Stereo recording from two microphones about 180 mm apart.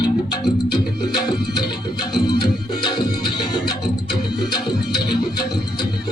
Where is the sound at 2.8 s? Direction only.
25° left (ahead or behind).